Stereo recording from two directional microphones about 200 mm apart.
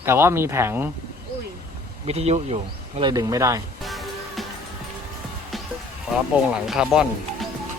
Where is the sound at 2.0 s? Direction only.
30° right (ahead or behind).